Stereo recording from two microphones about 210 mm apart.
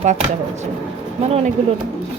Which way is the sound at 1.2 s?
30° right (ahead or behind).